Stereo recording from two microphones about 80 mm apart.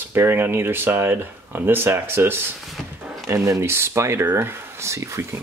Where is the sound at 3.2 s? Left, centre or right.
Right.